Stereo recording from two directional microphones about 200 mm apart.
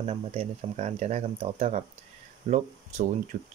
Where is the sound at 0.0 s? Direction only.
30° right (ahead or behind).